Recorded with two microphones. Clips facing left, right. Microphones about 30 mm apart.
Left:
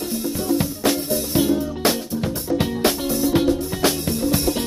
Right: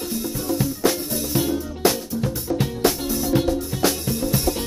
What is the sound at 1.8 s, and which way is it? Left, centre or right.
Music, left.